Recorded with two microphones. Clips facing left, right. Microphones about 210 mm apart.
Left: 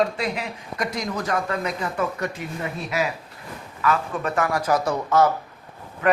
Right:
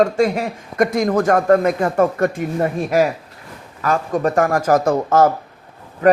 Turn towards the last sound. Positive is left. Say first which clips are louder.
# right 7 dB
turn(degrees=-40)  # may be behind; listen again after turning